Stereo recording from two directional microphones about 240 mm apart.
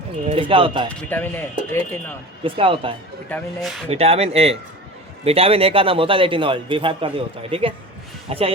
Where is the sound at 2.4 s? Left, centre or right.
Right.